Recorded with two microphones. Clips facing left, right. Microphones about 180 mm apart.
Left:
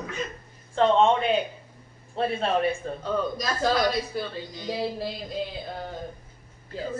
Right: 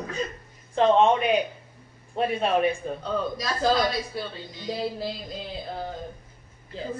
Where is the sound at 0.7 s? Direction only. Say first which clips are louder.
Right 1 dB; 15° right (ahead or behind).